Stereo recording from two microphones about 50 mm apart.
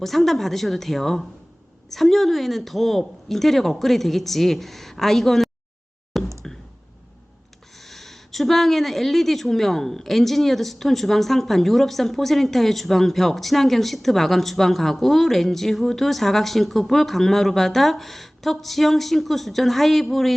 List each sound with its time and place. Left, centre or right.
0.0 s a woman's voice: centre
6.1 s a sound: centre
7.8 s a woman's voice: centre